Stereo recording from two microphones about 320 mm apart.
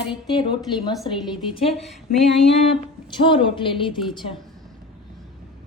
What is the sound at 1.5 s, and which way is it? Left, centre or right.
Speech, centre.